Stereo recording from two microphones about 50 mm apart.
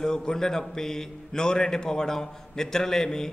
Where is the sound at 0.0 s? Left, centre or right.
Centre.